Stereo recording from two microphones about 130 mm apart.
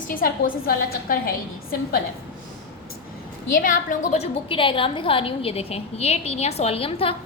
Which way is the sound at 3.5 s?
90° left.